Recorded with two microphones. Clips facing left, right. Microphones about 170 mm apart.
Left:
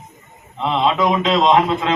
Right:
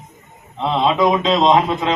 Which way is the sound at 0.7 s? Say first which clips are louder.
Right 1 dB; 20° right (ahead or behind).